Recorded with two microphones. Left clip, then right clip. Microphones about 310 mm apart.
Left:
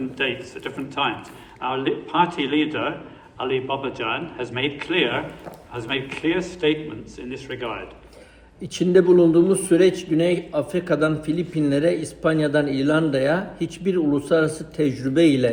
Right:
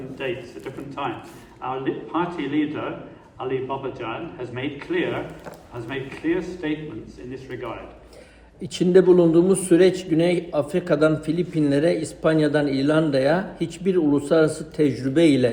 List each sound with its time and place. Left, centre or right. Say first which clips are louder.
0.2 s a man's voice: left 4 dB; left
8.6 s a man's voice: right 1 dB; centre